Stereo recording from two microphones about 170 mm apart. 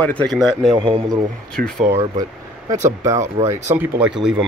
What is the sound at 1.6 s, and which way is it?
Speech, 65° right (ahead or behind).